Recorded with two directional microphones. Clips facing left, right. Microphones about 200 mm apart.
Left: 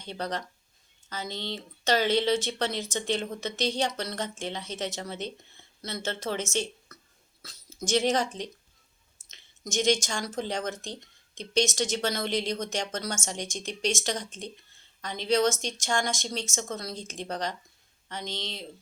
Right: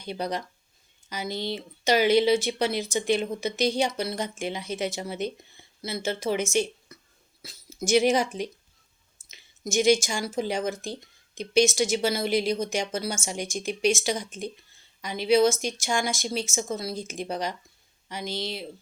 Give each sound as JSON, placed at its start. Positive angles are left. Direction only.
{"t": 0.0, "sound": "speech", "side_deg": -10}